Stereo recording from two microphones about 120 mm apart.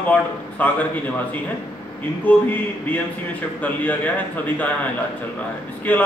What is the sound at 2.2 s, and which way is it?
A man's voice, 15° left (ahead or behind).